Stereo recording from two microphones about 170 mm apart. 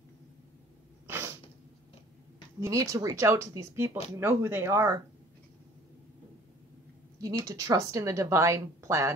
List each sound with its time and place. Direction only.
1.0 s sneeze: 15° right (ahead or behind)
2.6 s a woman's voice: 15° right (ahead or behind)
7.2 s a woman's voice: 20° right (ahead or behind)